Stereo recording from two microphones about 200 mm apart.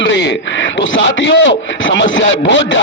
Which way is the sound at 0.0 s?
60° left (ahead or behind).